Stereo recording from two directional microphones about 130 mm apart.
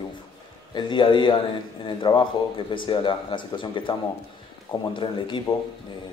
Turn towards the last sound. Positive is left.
turn(degrees=40)  # may be behind; listen again after turning